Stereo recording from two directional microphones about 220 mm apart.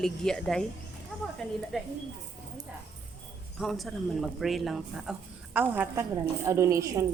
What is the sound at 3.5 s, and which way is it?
A woman's voice, centre (ahead or behind).